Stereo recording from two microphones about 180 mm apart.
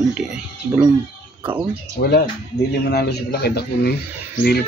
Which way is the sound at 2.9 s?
65° left (ahead or behind).